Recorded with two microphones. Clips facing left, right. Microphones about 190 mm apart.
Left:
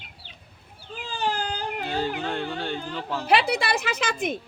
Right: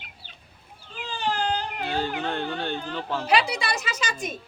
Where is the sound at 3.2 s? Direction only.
55° left (ahead or behind).